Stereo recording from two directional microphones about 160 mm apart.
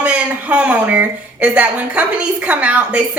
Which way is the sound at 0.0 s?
10° right (ahead or behind).